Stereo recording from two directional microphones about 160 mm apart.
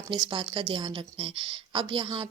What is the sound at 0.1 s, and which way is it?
A woman's voice, 30° right (ahead or behind).